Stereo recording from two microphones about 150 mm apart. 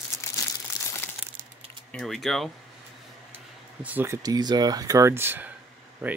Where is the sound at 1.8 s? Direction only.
5° left (ahead or behind).